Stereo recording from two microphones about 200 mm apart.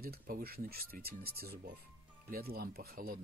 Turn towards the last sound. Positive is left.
turn(degrees=-50)  # may be behind; listen again after turning